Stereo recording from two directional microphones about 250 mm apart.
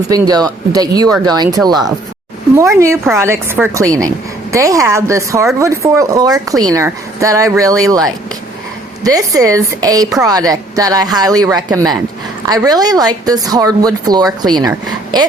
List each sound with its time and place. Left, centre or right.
0.1 s a woman's voice: centre